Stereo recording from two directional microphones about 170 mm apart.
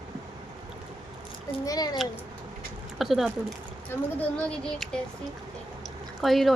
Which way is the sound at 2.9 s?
Centre (ahead or behind).